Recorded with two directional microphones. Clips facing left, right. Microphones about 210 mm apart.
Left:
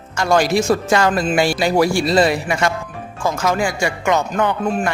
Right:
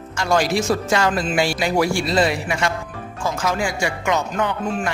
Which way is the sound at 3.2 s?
50° left (ahead or behind).